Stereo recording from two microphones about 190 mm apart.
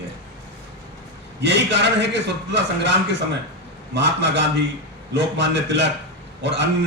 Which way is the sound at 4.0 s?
70° right (ahead or behind).